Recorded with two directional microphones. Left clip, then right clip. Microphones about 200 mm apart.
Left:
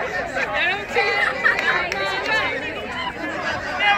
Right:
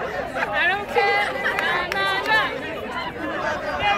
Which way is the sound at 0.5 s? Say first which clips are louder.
Right 1 dB; 25° right (ahead or behind).